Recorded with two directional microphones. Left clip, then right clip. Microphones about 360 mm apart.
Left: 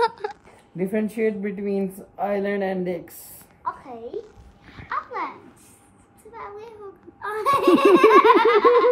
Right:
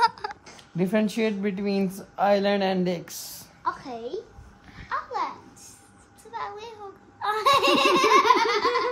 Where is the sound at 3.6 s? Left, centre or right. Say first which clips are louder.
Right 1 dB; right.